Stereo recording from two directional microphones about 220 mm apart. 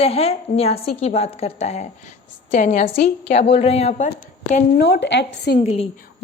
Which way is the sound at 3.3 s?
30° left (ahead or behind).